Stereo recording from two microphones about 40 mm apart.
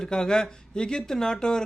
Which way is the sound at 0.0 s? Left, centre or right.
Centre.